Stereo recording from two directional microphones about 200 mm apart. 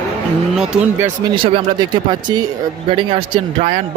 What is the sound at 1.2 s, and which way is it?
Speech, 20° right (ahead or behind).